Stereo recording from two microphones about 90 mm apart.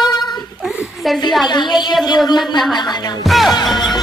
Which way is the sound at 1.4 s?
55° left (ahead or behind).